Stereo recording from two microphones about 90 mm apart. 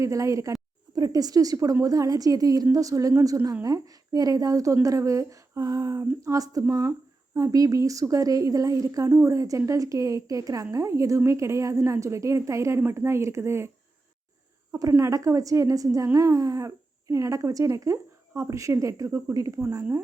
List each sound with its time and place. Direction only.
0.0 s a woman's voice: 35° right (ahead or behind)
14.7 s speech: 35° right (ahead or behind)